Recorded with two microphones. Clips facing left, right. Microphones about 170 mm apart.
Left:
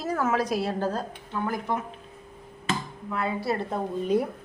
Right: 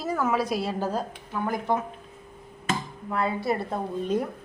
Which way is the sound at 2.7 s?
40° right (ahead or behind).